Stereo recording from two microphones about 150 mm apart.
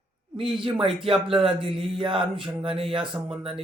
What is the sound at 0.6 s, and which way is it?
Speech, 35° right (ahead or behind).